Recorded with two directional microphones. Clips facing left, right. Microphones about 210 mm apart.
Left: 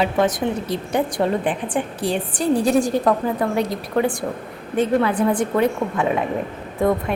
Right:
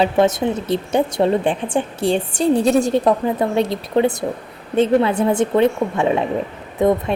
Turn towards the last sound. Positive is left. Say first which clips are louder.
# right 3 dB
turn(degrees=-20)  # may be behind; listen again after turning